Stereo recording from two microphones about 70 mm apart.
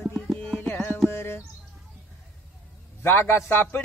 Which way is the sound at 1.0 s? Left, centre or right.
Left.